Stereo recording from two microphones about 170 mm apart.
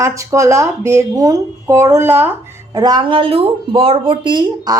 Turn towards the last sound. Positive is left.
turn(degrees=-25)  # may be behind; listen again after turning